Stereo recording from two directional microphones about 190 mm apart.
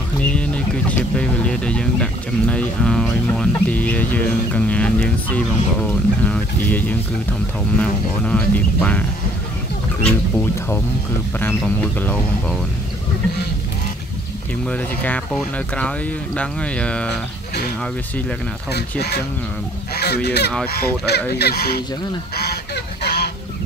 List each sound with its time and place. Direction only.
0.2 s speech: 5° left (ahead or behind)
10.0 s speech: 10° left (ahead or behind)
14.7 s speech: 5° left (ahead or behind)
18.7 s speech: 60° left (ahead or behind)
20.2 s speech: 60° left (ahead or behind)
23.0 s goose: 55° left (ahead or behind)